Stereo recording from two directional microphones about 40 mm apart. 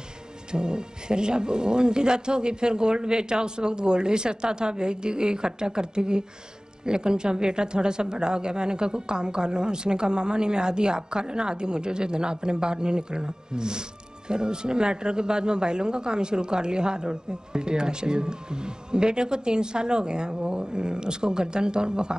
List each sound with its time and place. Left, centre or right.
0.5 s a woman's voice: right